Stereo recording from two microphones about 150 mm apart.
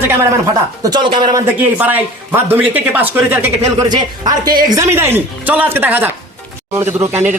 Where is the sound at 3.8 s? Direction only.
30° right (ahead or behind).